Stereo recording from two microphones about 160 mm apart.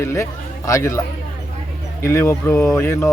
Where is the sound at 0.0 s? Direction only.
20° left (ahead or behind).